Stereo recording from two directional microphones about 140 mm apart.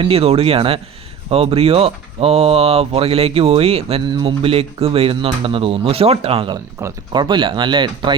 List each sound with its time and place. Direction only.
0.0 s speech: 45° right (ahead or behind)
4.1 s speech: 35° right (ahead or behind)
6.7 s speech: 25° right (ahead or behind)